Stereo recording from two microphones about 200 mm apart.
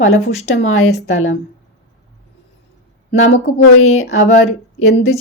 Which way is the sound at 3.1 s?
80° left.